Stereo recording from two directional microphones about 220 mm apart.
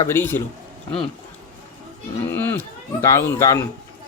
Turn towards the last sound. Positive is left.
turn(degrees=15)  # may be behind; listen again after turning